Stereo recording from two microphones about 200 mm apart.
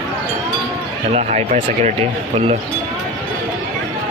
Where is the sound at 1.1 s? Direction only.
35° right (ahead or behind).